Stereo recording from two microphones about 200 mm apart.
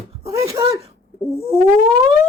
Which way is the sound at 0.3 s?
15° right (ahead or behind).